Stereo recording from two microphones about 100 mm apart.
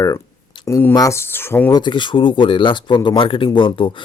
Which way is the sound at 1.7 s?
50° left (ahead or behind).